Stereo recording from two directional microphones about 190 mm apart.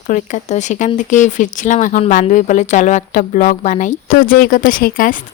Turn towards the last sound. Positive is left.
turn(degrees=45)  # may be behind; listen again after turning